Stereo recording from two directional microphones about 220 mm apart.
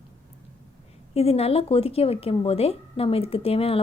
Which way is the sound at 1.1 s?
25° left (ahead or behind).